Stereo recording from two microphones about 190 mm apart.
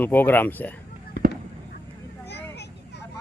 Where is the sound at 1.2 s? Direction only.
60° left (ahead or behind).